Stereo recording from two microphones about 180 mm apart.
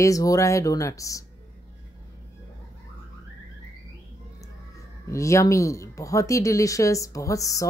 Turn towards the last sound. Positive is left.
turn(degrees=20)  # may be behind; listen again after turning